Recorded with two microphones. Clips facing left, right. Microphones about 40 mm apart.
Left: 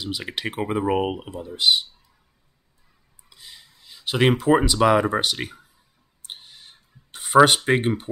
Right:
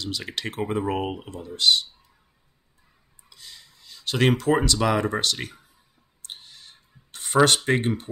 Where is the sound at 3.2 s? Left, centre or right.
Centre.